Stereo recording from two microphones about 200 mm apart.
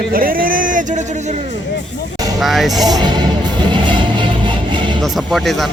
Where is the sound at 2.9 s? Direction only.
20° right (ahead or behind).